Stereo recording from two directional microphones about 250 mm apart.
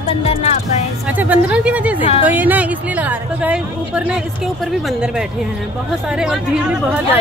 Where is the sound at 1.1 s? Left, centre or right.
Centre.